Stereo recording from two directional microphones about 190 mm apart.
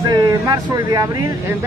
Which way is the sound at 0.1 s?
15° right (ahead or behind).